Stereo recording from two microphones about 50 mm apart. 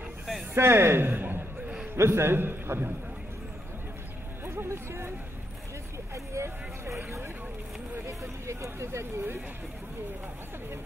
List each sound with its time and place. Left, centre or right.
0.6 s a man's voice: right
2.0 s a man's voice: right
4.5 s speech: right
6.1 s vehicle: right
8.1 s speech: right